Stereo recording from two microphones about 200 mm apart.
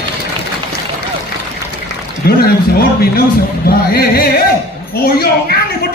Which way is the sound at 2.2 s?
50° left (ahead or behind).